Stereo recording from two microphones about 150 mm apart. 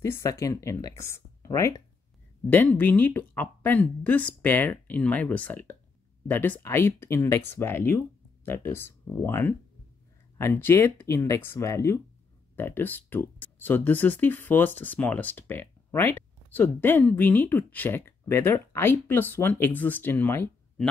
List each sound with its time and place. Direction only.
0.0 s speech: 20° left (ahead or behind)